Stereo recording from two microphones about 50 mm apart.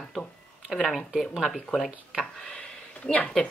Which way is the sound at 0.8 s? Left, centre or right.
Centre.